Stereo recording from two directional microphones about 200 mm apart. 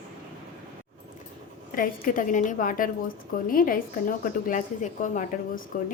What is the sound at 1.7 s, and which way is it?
A woman's voice, 45° left (ahead or behind).